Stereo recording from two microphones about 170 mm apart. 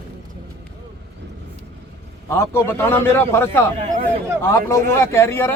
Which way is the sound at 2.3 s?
15° left (ahead or behind).